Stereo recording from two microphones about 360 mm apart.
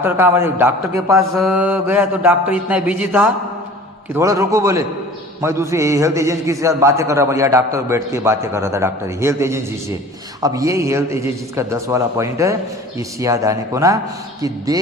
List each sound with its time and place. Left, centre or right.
0.0 s mantra: centre
4.1 s a man's voice: centre